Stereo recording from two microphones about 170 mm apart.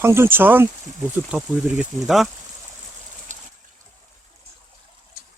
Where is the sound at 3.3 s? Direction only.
50° right (ahead or behind).